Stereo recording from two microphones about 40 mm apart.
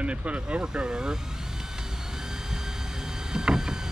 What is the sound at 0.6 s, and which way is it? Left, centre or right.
Vehicle, centre.